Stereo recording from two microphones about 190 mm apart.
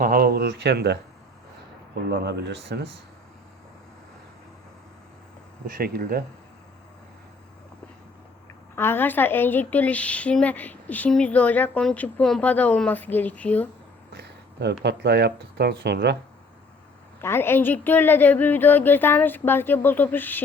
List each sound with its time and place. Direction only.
0.0 s speech: 50° right (ahead or behind)
2.0 s speech: 60° right (ahead or behind)
5.6 s speech: 50° right (ahead or behind)
8.7 s speech: 10° left (ahead or behind)
14.1 s speech: 65° right (ahead or behind)
17.2 s speech: 10° left (ahead or behind)